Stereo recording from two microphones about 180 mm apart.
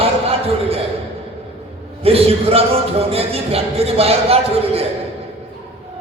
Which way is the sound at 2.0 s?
35° right (ahead or behind).